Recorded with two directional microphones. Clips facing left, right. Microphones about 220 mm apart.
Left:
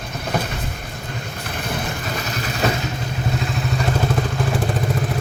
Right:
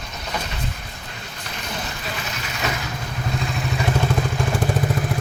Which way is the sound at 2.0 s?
40° left (ahead or behind).